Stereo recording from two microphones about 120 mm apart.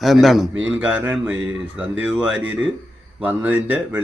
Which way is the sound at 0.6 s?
10° right (ahead or behind).